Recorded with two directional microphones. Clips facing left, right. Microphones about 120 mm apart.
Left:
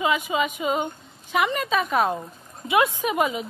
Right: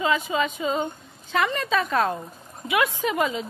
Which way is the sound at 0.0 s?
15° left (ahead or behind).